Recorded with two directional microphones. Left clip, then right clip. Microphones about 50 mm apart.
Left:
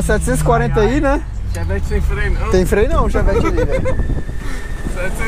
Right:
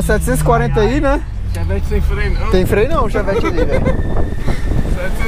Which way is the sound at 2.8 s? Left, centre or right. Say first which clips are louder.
Right 1 dB; centre.